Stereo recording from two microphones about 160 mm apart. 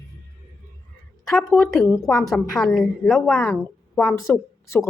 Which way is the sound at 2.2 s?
5° left (ahead or behind).